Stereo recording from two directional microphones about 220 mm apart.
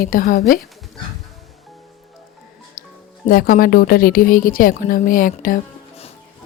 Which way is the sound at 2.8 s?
45° left (ahead or behind).